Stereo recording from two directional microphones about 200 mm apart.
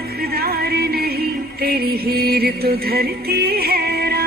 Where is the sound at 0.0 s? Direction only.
50° right (ahead or behind).